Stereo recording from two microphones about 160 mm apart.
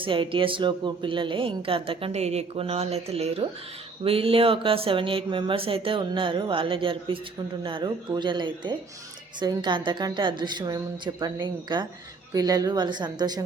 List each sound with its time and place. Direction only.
0.0 s a woman's voice: 30° right (ahead or behind)